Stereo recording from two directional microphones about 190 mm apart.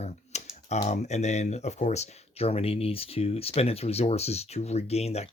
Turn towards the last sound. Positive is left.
turn(degrees=35)  # may be behind; listen again after turning